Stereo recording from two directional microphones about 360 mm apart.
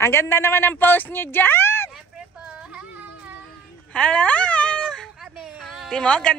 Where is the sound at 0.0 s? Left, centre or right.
Centre.